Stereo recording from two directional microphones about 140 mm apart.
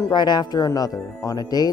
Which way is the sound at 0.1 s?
30° left (ahead or behind).